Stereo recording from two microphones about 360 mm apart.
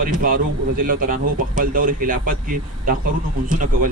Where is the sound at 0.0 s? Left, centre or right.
Right.